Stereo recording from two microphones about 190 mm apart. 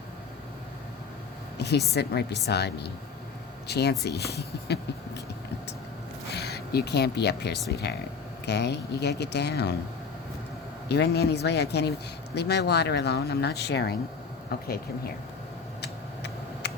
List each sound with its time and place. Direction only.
1.5 s a sound: 60° left (ahead or behind)
1.9 s speech: 60° left (ahead or behind)
6.3 s speech: 55° left (ahead or behind)
10.8 s speech: 60° left (ahead or behind)
15.8 s tick: 60° left (ahead or behind)